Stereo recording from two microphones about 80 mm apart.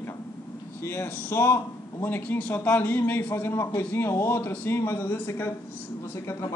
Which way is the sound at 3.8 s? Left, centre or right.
Left.